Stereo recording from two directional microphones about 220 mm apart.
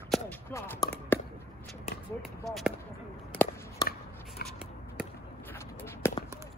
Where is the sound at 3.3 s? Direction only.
10° left (ahead or behind).